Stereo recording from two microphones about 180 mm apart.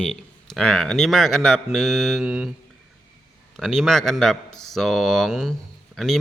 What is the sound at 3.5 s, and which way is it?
A man's voice, centre (ahead or behind).